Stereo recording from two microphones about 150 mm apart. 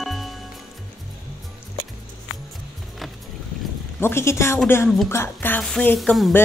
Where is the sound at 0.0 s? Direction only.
Centre (ahead or behind).